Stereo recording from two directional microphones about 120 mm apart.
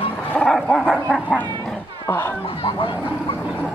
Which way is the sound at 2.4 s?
50° left (ahead or behind).